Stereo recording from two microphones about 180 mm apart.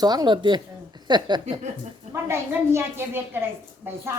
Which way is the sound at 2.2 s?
15° right (ahead or behind).